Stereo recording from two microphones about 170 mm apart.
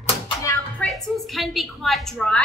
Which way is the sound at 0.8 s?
Centre (ahead or behind).